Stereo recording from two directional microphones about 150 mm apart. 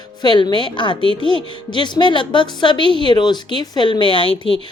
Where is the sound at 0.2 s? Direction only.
30° left (ahead or behind).